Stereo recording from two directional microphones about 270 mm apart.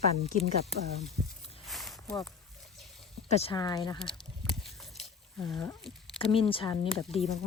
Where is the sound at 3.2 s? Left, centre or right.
Left.